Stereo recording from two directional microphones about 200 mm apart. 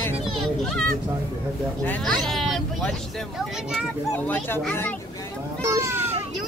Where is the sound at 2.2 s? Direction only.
Centre (ahead or behind).